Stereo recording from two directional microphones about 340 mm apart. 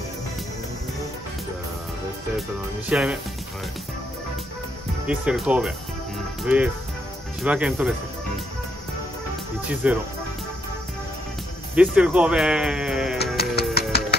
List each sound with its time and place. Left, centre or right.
2.9 s speech: centre
5.0 s speech: centre
9.8 s speech: centre
11.7 s speech: centre
13.2 s music: left